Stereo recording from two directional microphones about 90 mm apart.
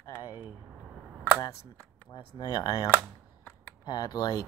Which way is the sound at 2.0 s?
55° left (ahead or behind).